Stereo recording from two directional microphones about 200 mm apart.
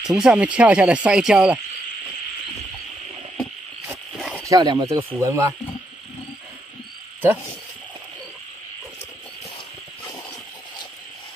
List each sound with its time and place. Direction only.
0.0 s speech: 5° right (ahead or behind)
3.8 s frog: 5° right (ahead or behind)
4.5 s speech: 20° right (ahead or behind)